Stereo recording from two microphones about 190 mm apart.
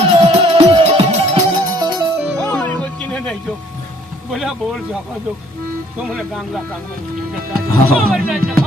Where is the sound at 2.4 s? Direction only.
10° left (ahead or behind).